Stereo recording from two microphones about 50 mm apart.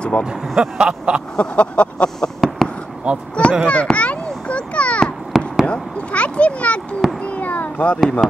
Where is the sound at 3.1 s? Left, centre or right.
Right.